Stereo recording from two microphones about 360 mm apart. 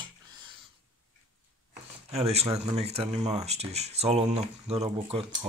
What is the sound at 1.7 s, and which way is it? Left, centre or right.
Speech, centre.